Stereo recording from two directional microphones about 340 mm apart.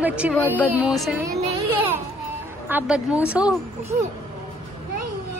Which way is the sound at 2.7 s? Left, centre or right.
Centre.